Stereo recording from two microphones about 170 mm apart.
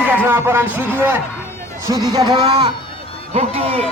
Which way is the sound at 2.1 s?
25° right (ahead or behind).